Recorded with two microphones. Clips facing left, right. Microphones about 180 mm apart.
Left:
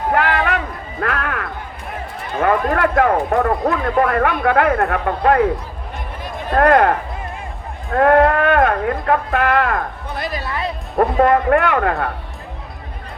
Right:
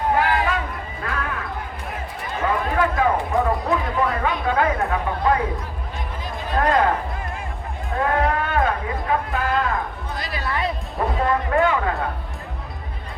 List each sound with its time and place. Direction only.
0.1 s music: 70° left (ahead or behind)
2.4 s speech: 65° left (ahead or behind)
6.5 s speech: 60° left (ahead or behind)
7.9 s speech: 65° left (ahead or behind)